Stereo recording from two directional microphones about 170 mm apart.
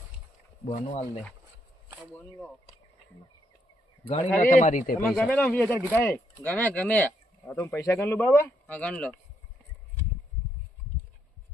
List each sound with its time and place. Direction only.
0.7 s speech: 35° left (ahead or behind)
4.4 s a man's voice: 45° left (ahead or behind)
4.9 s speech: 5° left (ahead or behind)